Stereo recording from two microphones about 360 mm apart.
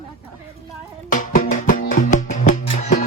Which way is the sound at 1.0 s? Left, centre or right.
Left.